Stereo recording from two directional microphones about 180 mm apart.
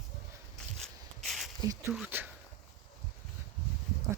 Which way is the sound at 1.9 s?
10° right (ahead or behind).